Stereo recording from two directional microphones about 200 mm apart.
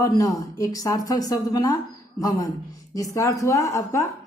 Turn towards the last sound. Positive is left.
turn(degrees=15)  # may be behind; listen again after turning